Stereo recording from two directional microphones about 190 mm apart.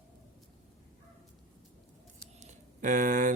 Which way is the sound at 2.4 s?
40° right (ahead or behind).